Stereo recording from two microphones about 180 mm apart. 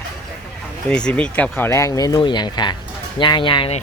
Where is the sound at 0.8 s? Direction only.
5° left (ahead or behind).